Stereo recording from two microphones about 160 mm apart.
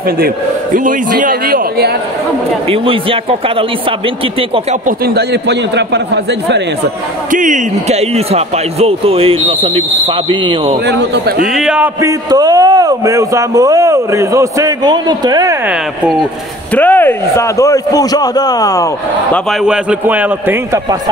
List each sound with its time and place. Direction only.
0.7 s a man's voice: 55° right (ahead or behind)
2.7 s speech: 35° right (ahead or behind)
4.8 s a man's voice: 85° right
7.2 s speech: 55° right (ahead or behind); by 10.8 s 35° right (ahead or behind)
10.9 s a man's voice: 85° right
11.5 s speech: 5° right (ahead or behind)
12.0 s speech: 20° right (ahead or behind)
16.7 s a man's voice: 10° left (ahead or behind)
19.6 s a man's voice: 5° right (ahead or behind)